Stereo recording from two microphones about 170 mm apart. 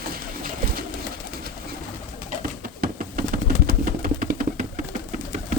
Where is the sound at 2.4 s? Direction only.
55° right (ahead or behind).